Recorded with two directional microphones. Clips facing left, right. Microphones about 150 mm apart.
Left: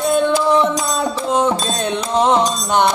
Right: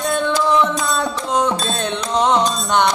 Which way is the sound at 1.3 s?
5° left (ahead or behind).